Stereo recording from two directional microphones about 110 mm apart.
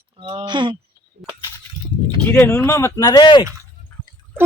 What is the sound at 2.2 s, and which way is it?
Speech, 20° left (ahead or behind).